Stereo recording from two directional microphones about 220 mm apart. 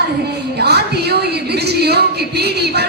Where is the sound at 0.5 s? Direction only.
50° right (ahead or behind).